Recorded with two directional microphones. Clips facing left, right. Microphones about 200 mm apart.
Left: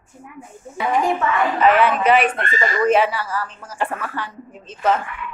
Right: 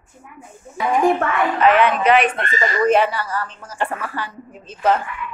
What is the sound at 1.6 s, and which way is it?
Speech, 5° left (ahead or behind).